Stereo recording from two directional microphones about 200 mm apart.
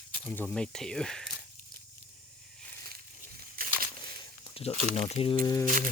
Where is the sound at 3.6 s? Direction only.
45° right (ahead or behind).